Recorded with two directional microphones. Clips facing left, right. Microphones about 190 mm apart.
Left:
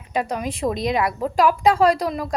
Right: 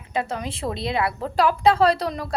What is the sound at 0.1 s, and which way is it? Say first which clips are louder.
A woman's voice: left 3 dB; 15° left (ahead or behind).